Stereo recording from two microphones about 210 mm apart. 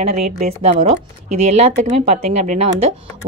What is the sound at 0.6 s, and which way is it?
A woman's voice, 30° right (ahead or behind).